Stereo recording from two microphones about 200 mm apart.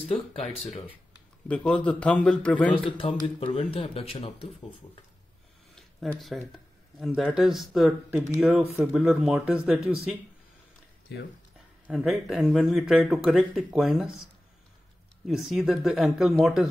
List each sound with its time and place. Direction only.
0.1 s speech: 30° left (ahead or behind)
1.5 s a man's voice: 5° left (ahead or behind)
3.0 s speech: 25° left (ahead or behind)
5.8 s a sound: centre (ahead or behind)
7.2 s speech: centre (ahead or behind)
11.9 s speech: centre (ahead or behind)